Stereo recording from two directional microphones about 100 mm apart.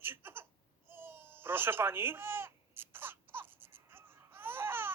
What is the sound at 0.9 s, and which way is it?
Baby cry, 25° right (ahead or behind).